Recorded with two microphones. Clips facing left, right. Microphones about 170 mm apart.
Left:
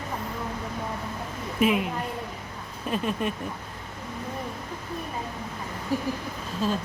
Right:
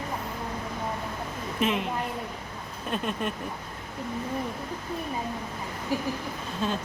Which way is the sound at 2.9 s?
Centre (ahead or behind).